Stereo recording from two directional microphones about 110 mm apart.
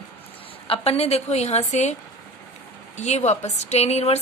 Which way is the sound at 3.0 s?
90° left.